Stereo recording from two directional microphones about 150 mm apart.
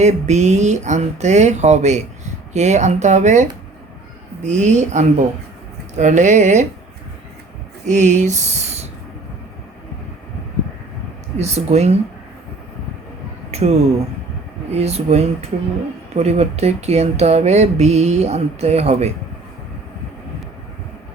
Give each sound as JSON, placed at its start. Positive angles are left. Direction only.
{"t": 0.0, "sound": "speech", "side_deg": -50}
{"t": 4.4, "sound": "speech", "side_deg": -55}
{"t": 7.9, "sound": "speech", "side_deg": -55}
{"t": 11.3, "sound": "speech", "side_deg": -45}
{"t": 13.5, "sound": "speech", "side_deg": -45}
{"t": 14.8, "sound": "speech", "side_deg": -45}